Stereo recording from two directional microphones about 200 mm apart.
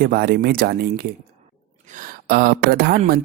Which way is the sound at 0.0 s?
50° right (ahead or behind).